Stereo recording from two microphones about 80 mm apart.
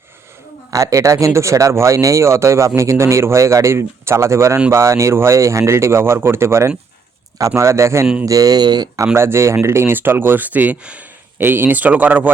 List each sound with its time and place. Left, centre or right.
0.7 s speech: right
9.1 s speech: right